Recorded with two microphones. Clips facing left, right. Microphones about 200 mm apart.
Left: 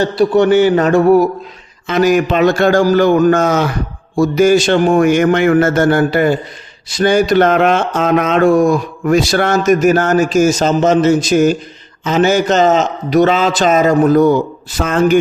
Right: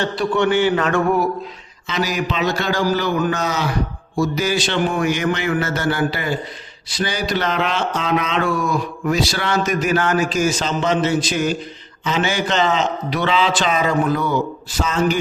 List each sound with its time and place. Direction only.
0.0 s speech: 40° left (ahead or behind)
1.9 s speech: 50° left (ahead or behind)